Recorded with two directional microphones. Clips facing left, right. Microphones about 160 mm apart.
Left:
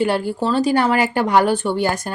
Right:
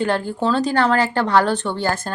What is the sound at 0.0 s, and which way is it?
A woman's voice, 10° left (ahead or behind).